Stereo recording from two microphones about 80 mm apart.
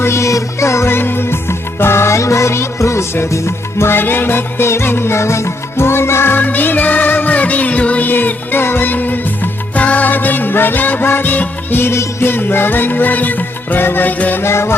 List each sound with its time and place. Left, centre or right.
0.0 s music: left
14.4 s music: left